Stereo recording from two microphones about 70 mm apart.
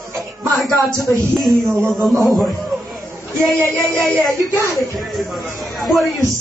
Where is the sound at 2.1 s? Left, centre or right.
Right.